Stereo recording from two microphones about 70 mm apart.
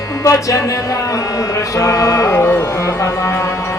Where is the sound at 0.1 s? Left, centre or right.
Left.